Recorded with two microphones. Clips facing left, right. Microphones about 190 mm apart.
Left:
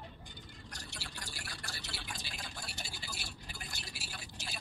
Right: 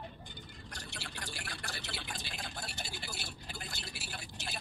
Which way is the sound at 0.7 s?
55° right (ahead or behind).